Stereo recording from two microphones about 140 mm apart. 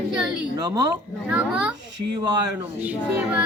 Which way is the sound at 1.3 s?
10° right (ahead or behind).